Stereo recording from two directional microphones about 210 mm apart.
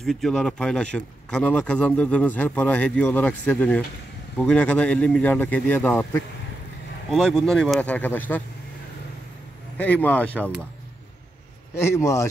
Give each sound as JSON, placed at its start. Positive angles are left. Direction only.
{"t": 0.0, "sound": "speech", "side_deg": 0}
{"t": 9.8, "sound": "speech", "side_deg": 10}
{"t": 11.8, "sound": "speech", "side_deg": 15}